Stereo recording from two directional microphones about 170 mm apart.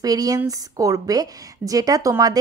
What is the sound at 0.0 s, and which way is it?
A woman's voice, 20° right (ahead or behind).